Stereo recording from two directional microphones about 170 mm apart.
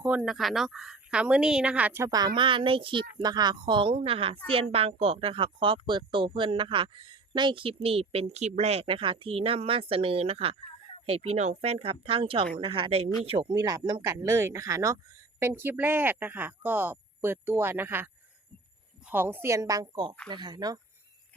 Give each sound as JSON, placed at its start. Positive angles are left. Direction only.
{"t": 0.2, "sound": "a woman's voice", "side_deg": 0}